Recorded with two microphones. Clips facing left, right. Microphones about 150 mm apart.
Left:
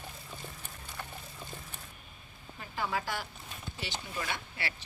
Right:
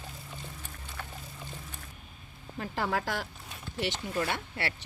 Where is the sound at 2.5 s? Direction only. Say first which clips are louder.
Right 4 dB; 80° right.